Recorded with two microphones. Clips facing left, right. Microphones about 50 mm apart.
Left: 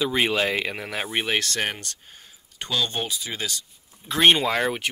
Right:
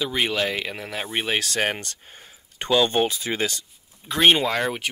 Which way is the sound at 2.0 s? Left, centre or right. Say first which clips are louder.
Right 3 dB; centre.